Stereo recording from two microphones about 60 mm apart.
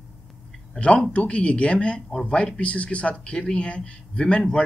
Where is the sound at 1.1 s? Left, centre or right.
Centre.